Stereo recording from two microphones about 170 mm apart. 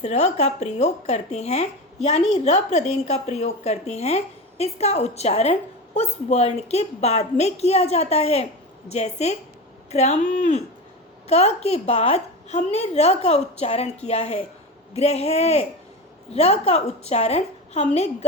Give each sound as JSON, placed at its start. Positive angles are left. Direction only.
{"t": 0.0, "sound": "a woman's voice", "side_deg": 40}